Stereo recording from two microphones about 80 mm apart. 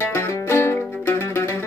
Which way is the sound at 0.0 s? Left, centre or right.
Left.